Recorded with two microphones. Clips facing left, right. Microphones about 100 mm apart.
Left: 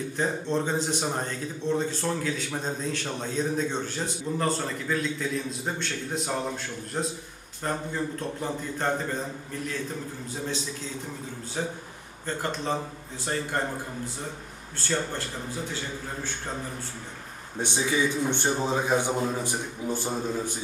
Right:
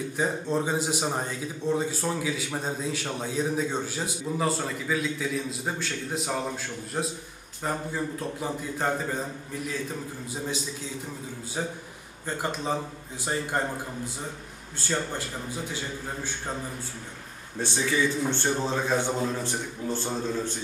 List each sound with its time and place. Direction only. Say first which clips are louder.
0.2 s a man's voice: even; 10° right (ahead or behind)
12.2 s a man's voice: even; 15° right (ahead or behind)
17.6 s a man's voice: even; 15° left (ahead or behind)